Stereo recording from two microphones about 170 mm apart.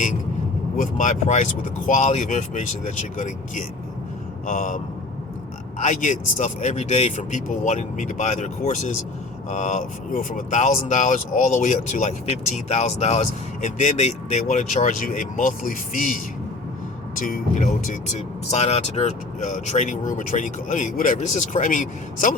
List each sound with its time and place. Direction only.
0.8 s speech: 45° left (ahead or behind)
5.8 s speech: 45° left (ahead or behind)